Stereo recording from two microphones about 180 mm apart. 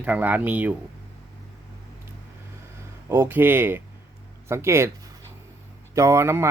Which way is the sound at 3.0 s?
15° right (ahead or behind).